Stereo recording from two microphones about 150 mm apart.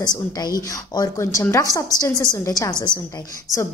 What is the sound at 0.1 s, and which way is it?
A woman's voice, 25° left (ahead or behind).